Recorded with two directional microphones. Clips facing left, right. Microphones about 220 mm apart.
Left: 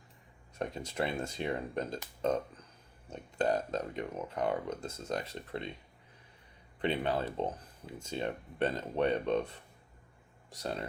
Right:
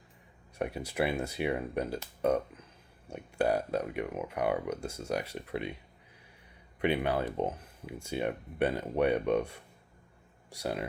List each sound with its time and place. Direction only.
0.6 s speech: 10° right (ahead or behind)
6.8 s speech: 10° right (ahead or behind)